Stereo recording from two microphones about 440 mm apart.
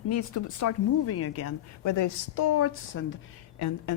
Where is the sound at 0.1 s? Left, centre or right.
Left.